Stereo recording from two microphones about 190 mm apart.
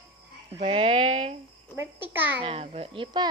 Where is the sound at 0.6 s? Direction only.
30° right (ahead or behind).